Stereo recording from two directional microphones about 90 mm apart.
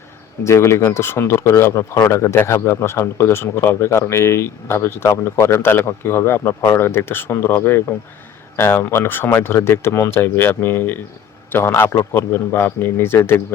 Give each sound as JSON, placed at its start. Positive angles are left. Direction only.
{"t": 0.4, "sound": "speech", "side_deg": 30}